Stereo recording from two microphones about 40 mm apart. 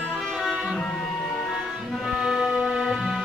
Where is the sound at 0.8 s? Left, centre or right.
Centre.